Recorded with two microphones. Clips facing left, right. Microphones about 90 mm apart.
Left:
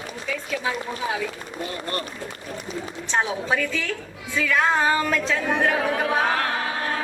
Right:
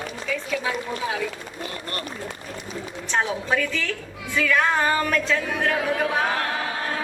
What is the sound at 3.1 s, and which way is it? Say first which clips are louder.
A woman's voice: even; 10° left (ahead or behind).